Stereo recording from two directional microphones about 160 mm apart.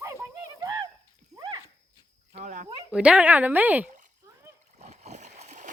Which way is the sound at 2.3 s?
50° right (ahead or behind).